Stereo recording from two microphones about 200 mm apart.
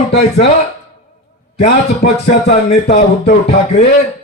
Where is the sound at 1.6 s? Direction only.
55° left (ahead or behind).